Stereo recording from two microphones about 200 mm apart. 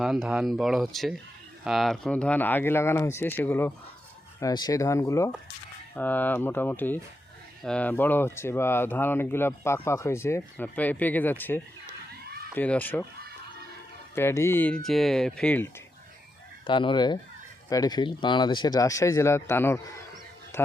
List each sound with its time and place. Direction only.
0.0 s speech: centre (ahead or behind)
12.2 s a sound: 50° right (ahead or behind)
12.5 s speech: 10° left (ahead or behind)
14.2 s speech: 15° left (ahead or behind)
16.6 s fowl: 25° left (ahead or behind)
17.7 s speech: 20° left (ahead or behind)